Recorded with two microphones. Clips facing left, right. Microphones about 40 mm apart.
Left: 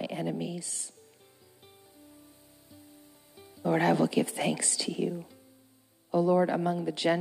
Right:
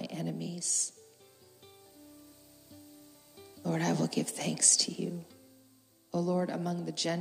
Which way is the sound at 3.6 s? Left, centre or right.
Left.